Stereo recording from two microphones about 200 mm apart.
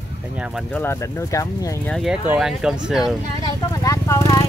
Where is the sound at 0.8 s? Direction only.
15° left (ahead or behind).